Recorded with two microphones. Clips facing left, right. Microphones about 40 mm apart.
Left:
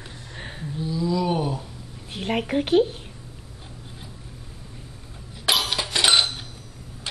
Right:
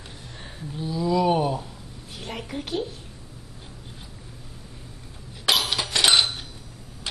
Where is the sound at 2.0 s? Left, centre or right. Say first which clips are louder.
Left 9 dB; left.